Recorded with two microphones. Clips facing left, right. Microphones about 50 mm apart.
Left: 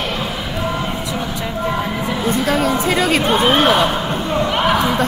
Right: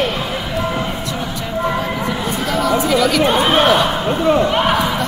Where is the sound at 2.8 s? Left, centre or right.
Left.